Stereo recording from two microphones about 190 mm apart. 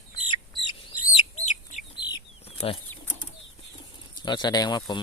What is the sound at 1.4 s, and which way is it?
Chicken, 40° left (ahead or behind).